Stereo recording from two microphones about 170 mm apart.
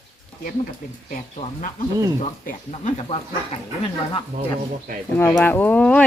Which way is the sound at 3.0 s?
35° left (ahead or behind).